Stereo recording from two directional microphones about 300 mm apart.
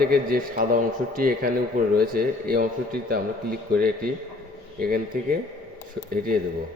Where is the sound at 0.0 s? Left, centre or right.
Right.